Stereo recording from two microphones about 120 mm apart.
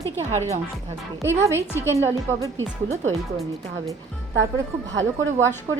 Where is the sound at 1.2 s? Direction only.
25° right (ahead or behind).